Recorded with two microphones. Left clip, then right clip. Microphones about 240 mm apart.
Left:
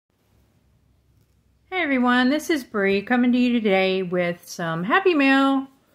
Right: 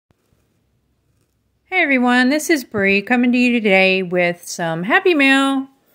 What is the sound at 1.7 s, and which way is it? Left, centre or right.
A woman's voice, right.